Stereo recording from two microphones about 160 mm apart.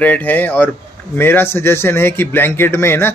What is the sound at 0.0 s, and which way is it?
Speech, 10° left (ahead or behind).